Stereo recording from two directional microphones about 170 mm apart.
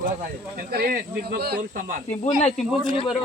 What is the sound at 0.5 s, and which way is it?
Speech, 60° right (ahead or behind).